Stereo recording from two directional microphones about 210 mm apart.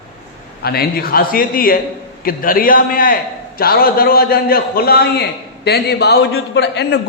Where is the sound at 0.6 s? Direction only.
45° left (ahead or behind).